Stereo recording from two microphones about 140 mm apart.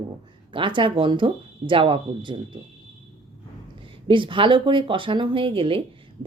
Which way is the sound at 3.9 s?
35° right (ahead or behind).